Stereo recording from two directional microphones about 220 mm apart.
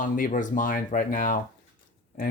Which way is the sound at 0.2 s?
35° left (ahead or behind).